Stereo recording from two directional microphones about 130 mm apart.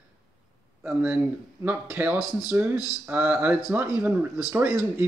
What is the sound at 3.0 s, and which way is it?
Speech, 15° right (ahead or behind).